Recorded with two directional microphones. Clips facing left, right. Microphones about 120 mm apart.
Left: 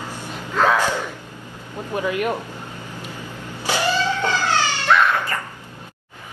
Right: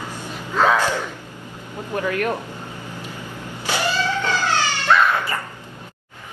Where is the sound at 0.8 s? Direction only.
15° left (ahead or behind).